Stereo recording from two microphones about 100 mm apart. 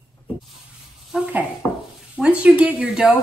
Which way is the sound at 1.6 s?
25° left (ahead or behind).